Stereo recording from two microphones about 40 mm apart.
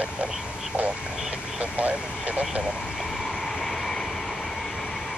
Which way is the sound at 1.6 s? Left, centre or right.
Right.